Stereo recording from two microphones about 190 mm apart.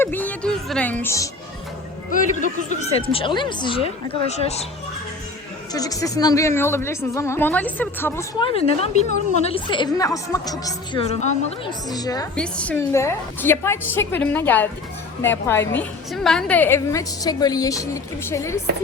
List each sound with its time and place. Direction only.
0.0 s a woman's voice: 10° left (ahead or behind)
2.0 s a woman's voice: 40° left (ahead or behind)
5.7 s a woman's voice: 20° left (ahead or behind)
8.4 s a woman's voice: 30° left (ahead or behind)
11.0 s a woman's voice: 35° left (ahead or behind)
11.9 s speech: 20° left (ahead or behind)
12.4 s a woman's voice: 5° left (ahead or behind)